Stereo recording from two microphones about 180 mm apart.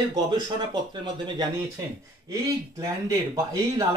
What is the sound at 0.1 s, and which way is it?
Speech, 20° right (ahead or behind).